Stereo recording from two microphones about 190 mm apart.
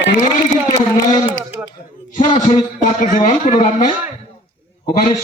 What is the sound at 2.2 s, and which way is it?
A man's voice, 35° left (ahead or behind).